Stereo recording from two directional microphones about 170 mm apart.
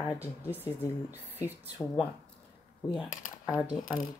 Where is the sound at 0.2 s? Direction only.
10° right (ahead or behind).